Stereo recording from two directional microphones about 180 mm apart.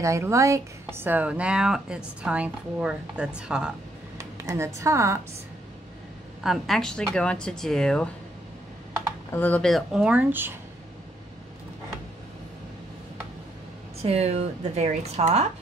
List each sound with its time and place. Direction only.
0.0 s speech: 15° right (ahead or behind)
4.2 s a sound: 15° right (ahead or behind)
4.7 s speech: 15° right (ahead or behind)
6.4 s speech: centre (ahead or behind)
9.3 s speech: 10° left (ahead or behind); by 10.5 s 10° right (ahead or behind)
14.0 s speech: 35° right (ahead or behind)